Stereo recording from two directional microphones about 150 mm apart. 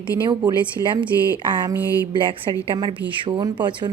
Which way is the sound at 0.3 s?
30° right (ahead or behind).